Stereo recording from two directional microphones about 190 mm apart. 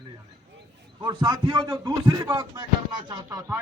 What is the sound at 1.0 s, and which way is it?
A man's voice, 25° right (ahead or behind).